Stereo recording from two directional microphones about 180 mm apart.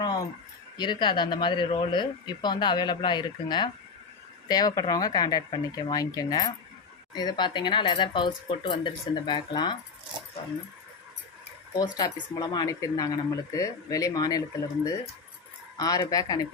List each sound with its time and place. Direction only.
0.0 s a sound: 20° left (ahead or behind)
0.8 s speech: 25° left (ahead or behind)
11.8 s speech: 20° left (ahead or behind)
15.8 s speech: 20° left (ahead or behind)